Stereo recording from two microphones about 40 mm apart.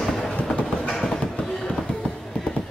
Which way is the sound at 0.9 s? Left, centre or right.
Centre.